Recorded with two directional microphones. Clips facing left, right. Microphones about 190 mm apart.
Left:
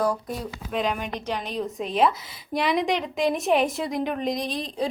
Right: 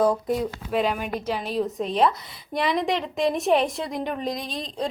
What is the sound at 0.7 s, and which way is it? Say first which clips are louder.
A woman's voice: right 1 dB; 5° right (ahead or behind).